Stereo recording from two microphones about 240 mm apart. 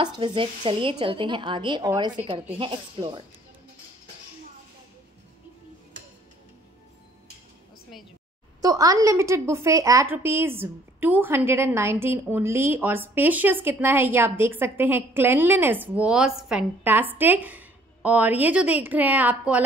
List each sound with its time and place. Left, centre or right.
0.0 s speech: centre
8.5 s a woman's voice: centre